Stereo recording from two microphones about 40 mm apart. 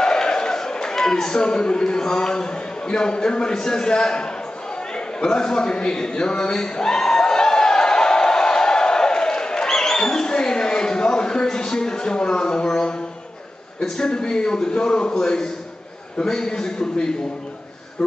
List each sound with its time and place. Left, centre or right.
0.0 s speech: centre
4.9 s a sound: left
11.5 s speech: centre
13.9 s a man's voice: centre